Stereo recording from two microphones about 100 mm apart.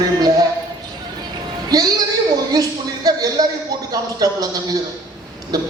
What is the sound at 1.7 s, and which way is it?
Speech, 40° right (ahead or behind).